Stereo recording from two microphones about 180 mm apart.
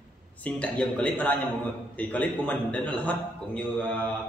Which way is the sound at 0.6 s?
5° left (ahead or behind).